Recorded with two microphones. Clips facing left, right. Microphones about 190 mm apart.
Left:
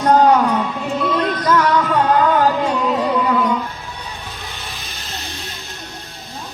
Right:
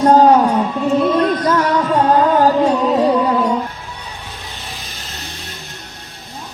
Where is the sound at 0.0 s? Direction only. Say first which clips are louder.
Right 3 dB; 30° right (ahead or behind).